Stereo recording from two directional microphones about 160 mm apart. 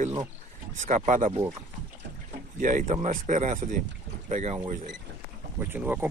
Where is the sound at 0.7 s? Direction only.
50° right (ahead or behind).